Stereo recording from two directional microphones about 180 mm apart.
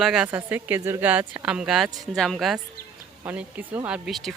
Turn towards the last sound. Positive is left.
turn(degrees=0)  # may be behind; listen again after turning